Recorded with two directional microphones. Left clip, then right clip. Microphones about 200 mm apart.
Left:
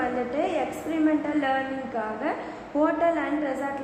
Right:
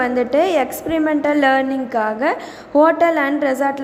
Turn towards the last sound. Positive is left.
turn(degrees=-40)  # may be behind; listen again after turning